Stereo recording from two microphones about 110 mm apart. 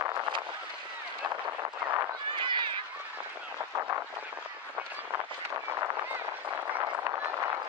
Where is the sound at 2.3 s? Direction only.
45° right (ahead or behind).